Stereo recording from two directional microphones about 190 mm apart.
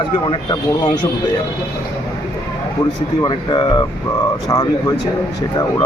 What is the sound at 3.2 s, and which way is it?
Speech, 25° left (ahead or behind).